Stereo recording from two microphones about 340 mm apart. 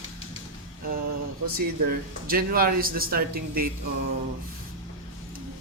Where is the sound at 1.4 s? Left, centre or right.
Right.